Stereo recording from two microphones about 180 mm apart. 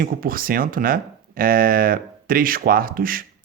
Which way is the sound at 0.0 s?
55° right (ahead or behind).